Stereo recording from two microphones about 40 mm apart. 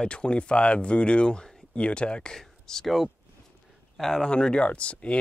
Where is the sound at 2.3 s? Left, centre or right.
Centre.